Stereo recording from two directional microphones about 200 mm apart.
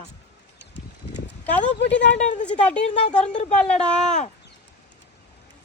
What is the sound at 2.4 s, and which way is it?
Speech, 5° left (ahead or behind).